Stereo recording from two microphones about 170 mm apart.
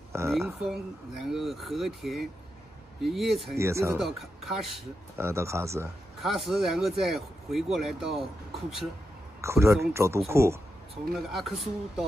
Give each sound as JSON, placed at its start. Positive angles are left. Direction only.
{"t": 0.6, "sound": "speech", "side_deg": -5}
{"t": 3.5, "sound": "speech", "side_deg": -15}
{"t": 4.0, "sound": "speech", "side_deg": 0}
{"t": 5.1, "sound": "speech", "side_deg": -15}
{"t": 6.2, "sound": "speech", "side_deg": 0}
{"t": 9.4, "sound": "speech", "side_deg": -15}
{"t": 11.1, "sound": "speech", "side_deg": 0}